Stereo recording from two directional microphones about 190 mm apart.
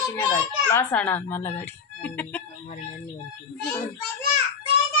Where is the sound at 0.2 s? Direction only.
25° left (ahead or behind).